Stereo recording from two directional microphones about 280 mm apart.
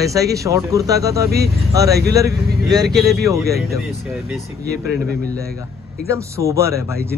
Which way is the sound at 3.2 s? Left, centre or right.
Centre.